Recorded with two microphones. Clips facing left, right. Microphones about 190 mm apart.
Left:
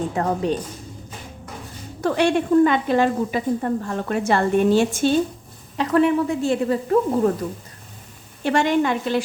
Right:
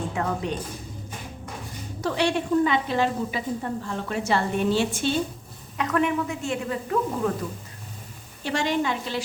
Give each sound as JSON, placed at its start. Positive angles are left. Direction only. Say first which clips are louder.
{"t": 0.1, "sound": "speech", "louder": "left 5 dB", "side_deg": 40}
{"t": 2.0, "sound": "speech", "louder": "left 5 dB", "side_deg": 50}
{"t": 5.7, "sound": "speech", "louder": "left 6 dB", "side_deg": 30}
{"t": 8.4, "sound": "a woman's voice", "louder": "left 6 dB", "side_deg": 55}